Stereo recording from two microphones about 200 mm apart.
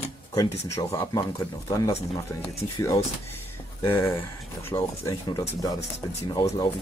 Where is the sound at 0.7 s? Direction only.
15° left (ahead or behind).